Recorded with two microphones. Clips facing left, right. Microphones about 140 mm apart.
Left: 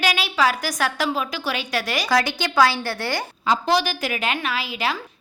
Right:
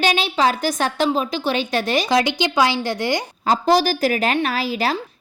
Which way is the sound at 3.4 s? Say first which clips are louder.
Right 4 dB; 40° right (ahead or behind).